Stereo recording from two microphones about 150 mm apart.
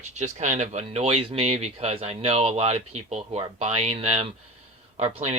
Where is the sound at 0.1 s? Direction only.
50° right (ahead or behind).